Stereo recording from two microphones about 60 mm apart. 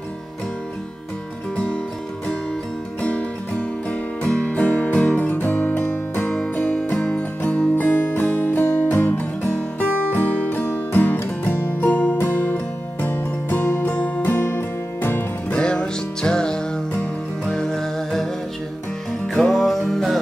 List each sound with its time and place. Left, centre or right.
3.0 s music: left
7.0 s music: centre
7.4 s music: left
13.9 s music: left
14.2 s music: left
15.5 s music: centre